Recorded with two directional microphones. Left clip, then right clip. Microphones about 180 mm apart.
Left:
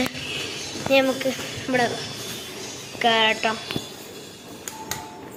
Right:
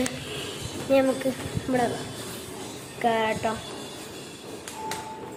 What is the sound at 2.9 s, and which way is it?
Speech, centre (ahead or behind).